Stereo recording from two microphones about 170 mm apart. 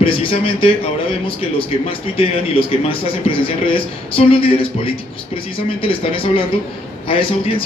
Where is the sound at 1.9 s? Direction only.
35° left (ahead or behind).